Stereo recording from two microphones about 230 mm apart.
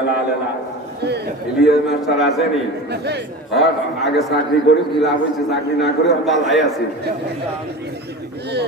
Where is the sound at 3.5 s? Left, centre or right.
Centre.